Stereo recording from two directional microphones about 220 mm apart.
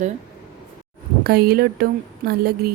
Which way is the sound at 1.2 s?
45° right (ahead or behind).